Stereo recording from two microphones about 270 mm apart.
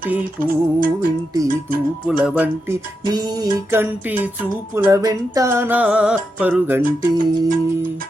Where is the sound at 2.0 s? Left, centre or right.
Centre.